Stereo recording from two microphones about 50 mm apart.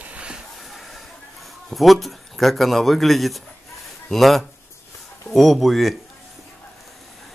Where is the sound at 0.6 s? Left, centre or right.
Centre.